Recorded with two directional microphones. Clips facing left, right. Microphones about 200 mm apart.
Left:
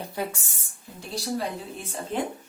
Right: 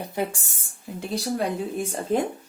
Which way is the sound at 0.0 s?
25° right (ahead or behind).